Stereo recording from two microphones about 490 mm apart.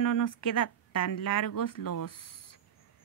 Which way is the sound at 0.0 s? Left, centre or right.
Left.